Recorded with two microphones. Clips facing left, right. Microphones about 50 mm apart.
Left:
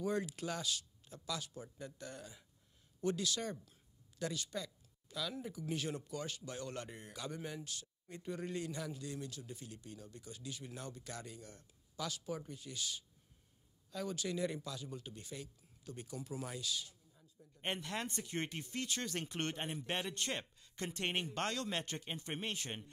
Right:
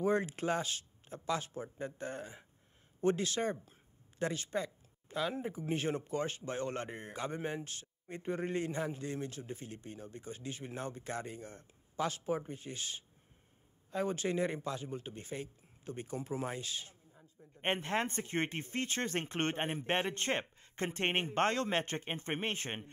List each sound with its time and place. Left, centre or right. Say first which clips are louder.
0.0 s a man's voice: right 6 dB; right